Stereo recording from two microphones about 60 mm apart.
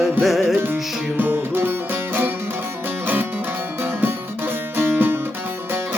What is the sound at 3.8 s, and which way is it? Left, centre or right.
Music, right.